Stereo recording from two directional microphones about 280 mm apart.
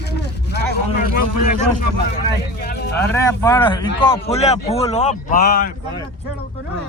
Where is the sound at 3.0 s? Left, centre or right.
Centre; by 5.7 s left.